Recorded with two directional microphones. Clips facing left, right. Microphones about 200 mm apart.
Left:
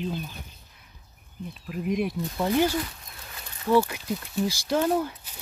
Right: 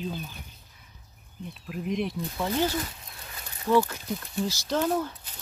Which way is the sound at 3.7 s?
15° left (ahead or behind).